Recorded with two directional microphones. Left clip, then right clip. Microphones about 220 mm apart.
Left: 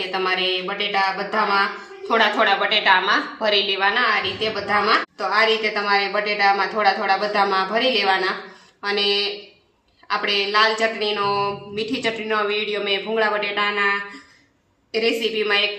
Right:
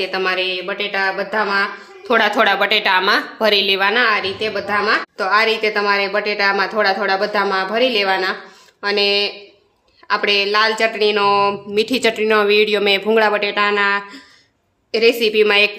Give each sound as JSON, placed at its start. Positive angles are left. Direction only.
{"t": 0.0, "sound": "a woman's voice", "side_deg": -40}